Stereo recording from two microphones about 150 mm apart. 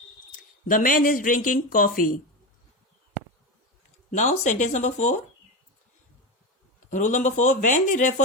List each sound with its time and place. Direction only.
0.7 s speech: 65° left (ahead or behind)
4.1 s speech: 55° left (ahead or behind)
6.9 s speech: 55° left (ahead or behind)